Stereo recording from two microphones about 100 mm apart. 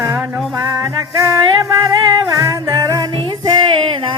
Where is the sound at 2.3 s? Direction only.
35° right (ahead or behind).